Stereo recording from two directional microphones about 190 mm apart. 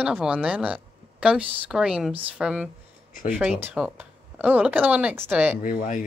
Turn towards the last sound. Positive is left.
turn(degrees=45)  # may be behind; listen again after turning